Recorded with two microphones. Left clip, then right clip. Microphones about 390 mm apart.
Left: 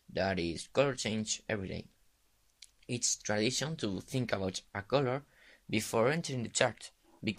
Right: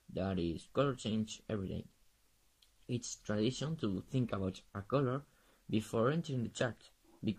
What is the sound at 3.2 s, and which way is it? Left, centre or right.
Speech, centre.